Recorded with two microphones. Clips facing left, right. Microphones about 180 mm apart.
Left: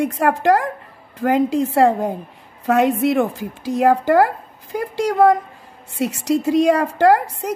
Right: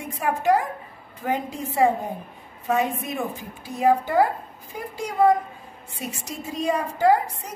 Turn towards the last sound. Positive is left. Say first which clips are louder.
# left 5 dB
turn(degrees=85)